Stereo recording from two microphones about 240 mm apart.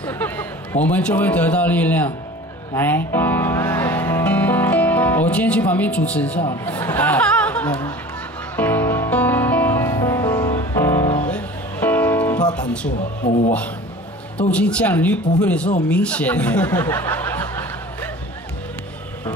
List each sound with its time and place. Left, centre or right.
0.0 s a man's voice: centre
2.7 s music: centre
6.4 s speech: centre
8.5 s music: centre
12.5 s speech: centre
13.2 s speech: left
14.5 s speech: centre